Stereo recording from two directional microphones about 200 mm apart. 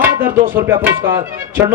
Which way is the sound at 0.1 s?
45° right (ahead or behind).